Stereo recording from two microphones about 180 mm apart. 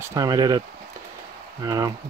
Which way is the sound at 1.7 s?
20° right (ahead or behind).